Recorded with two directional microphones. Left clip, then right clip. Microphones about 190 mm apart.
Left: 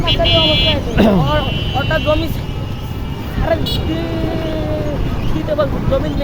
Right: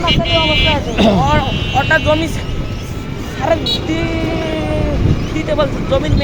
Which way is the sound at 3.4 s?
Centre (ahead or behind).